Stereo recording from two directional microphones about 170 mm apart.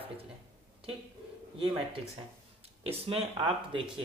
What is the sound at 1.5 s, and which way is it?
Speech, 30° right (ahead or behind).